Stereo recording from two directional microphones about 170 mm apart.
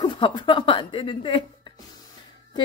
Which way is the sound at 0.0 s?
30° left (ahead or behind).